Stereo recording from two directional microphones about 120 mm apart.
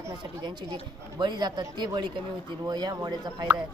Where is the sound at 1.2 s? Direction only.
35° right (ahead or behind).